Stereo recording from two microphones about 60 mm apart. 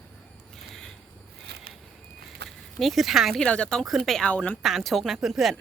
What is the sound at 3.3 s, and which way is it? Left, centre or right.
Speech, centre.